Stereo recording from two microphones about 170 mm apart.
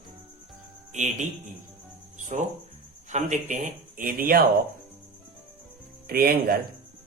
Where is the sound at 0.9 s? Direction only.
45° right (ahead or behind).